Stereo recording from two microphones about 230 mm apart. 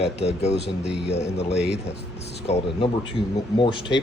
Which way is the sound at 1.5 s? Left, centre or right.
Left.